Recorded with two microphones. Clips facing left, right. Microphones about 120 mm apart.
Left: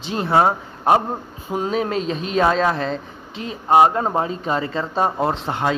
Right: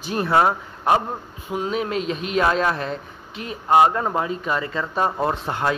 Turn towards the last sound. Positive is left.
turn(degrees=20)  # may be behind; listen again after turning